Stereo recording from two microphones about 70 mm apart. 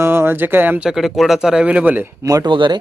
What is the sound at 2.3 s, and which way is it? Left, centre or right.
Speech, right.